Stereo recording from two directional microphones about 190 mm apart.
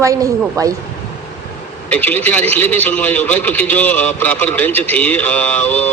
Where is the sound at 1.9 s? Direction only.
10° left (ahead or behind).